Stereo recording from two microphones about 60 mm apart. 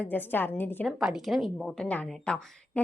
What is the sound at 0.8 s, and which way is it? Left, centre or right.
Speech, centre.